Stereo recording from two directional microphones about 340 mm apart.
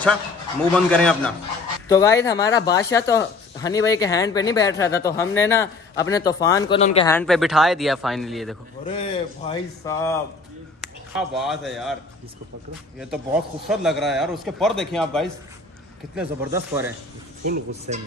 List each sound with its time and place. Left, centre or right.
0.7 s a man's voice: centre
7.1 s a man's voice: centre
8.8 s a man's voice: centre
13.1 s a man's voice: centre
17.5 s speech: centre